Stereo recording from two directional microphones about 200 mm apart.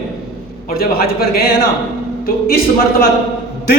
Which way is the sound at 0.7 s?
50° left (ahead or behind).